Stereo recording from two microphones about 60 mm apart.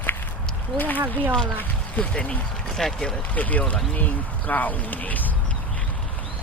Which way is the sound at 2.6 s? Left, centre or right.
Centre.